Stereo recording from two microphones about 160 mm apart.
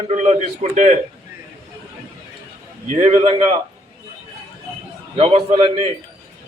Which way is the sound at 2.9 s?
40° right (ahead or behind).